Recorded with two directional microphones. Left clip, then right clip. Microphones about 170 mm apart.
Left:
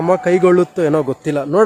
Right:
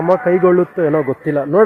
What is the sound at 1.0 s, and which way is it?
Speech, 15° left (ahead or behind).